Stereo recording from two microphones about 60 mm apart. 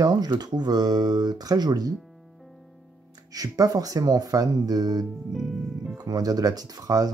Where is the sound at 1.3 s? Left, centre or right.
Right.